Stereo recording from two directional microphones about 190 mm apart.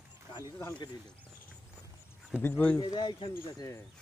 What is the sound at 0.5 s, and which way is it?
Speech, 15° left (ahead or behind).